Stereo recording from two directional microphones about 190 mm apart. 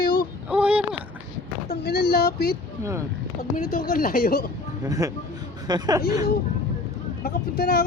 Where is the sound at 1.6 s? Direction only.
55° left (ahead or behind).